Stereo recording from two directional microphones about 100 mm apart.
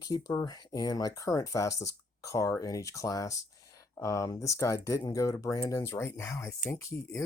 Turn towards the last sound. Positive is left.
turn(degrees=30)  # may be behind; listen again after turning